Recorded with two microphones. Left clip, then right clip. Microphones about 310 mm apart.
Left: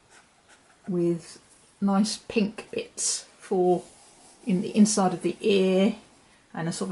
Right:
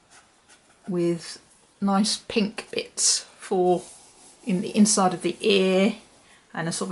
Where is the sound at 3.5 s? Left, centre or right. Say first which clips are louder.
Right 1 dB; centre.